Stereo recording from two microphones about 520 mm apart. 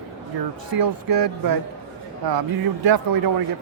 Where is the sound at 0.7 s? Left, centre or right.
Right.